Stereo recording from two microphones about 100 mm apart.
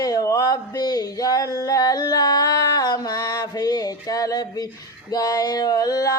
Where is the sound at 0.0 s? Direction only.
35° left (ahead or behind).